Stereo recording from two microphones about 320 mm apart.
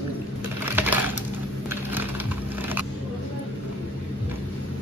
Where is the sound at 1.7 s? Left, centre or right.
Centre.